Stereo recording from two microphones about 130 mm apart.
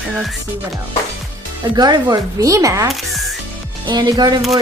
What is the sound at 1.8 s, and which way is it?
Speech, 30° right (ahead or behind).